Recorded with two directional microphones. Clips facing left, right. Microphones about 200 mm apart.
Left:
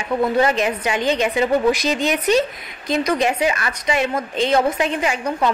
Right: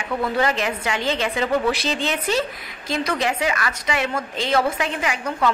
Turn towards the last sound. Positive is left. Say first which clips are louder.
# left 2 dB
turn(degrees=20)  # may be behind; listen again after turning